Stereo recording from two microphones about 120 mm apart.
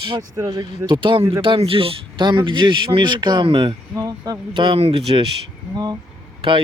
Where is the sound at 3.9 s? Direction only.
30° right (ahead or behind); by 5.3 s 50° right (ahead or behind).